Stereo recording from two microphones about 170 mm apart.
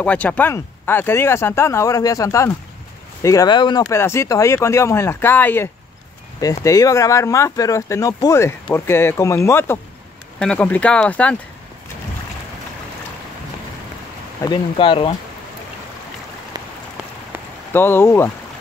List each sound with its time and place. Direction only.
0.0 s speech: 10° left (ahead or behind)
14.4 s speech: 25° left (ahead or behind)
17.7 s speech: 15° left (ahead or behind)